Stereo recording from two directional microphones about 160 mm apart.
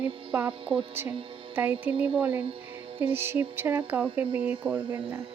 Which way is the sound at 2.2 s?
10° right (ahead or behind).